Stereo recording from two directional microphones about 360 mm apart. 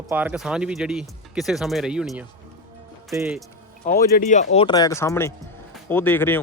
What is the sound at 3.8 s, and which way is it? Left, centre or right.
Speech, left.